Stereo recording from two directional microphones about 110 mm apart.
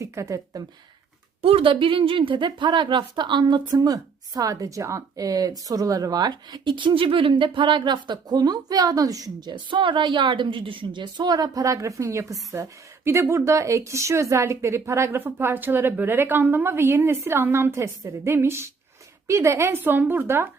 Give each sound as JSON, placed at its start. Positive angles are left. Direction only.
{"t": 0.0, "sound": "a woman's voice", "side_deg": -30}
{"t": 1.4, "sound": "a woman's voice", "side_deg": -60}